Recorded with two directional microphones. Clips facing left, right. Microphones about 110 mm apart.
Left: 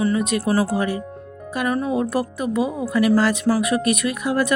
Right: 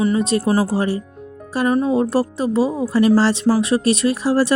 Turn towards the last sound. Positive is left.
turn(degrees=-30)  # may be behind; listen again after turning